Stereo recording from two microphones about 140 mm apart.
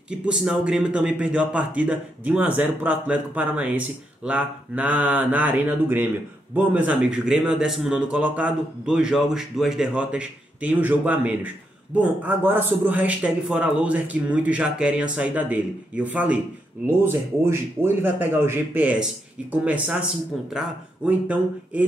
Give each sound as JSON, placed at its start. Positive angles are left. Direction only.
{"t": 0.1, "sound": "a man's voice", "side_deg": -5}